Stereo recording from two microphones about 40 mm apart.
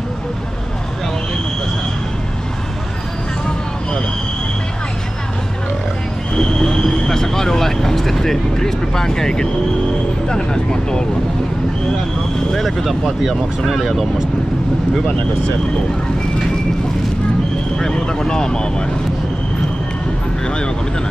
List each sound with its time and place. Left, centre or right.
6.3 s vehicle: centre
10.2 s speech: centre
12.5 s speech: centre
17.7 s speech: centre
20.4 s speech: left